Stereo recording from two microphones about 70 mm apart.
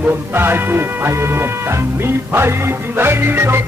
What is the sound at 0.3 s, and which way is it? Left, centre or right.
Music, right.